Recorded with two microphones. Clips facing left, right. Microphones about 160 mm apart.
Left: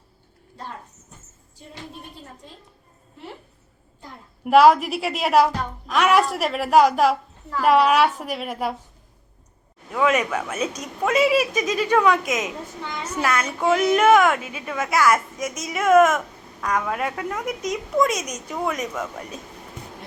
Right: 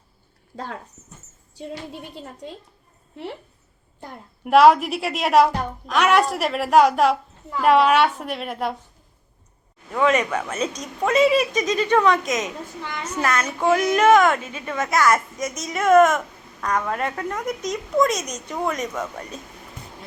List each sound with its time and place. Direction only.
0.5 s speech: 90° right
4.4 s a woman's voice: centre (ahead or behind)
9.9 s a woman's voice: 5° left (ahead or behind)